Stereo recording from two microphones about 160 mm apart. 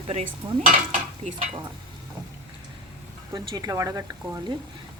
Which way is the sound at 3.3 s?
25° right (ahead or behind).